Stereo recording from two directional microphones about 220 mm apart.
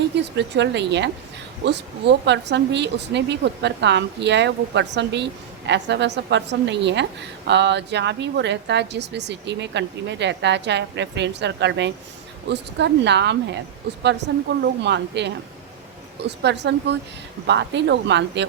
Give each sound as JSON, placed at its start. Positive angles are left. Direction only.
{"t": 0.3, "sound": "speech", "side_deg": -50}